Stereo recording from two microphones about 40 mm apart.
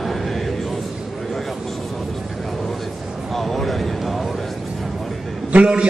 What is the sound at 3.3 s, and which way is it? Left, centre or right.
Speech, centre.